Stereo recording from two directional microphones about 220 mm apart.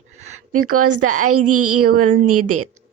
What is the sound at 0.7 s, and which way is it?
Speech, 90° right.